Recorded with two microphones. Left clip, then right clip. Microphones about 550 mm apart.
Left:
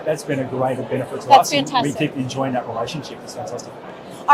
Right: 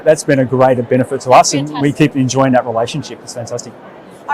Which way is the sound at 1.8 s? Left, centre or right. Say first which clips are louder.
Right 8 dB; right.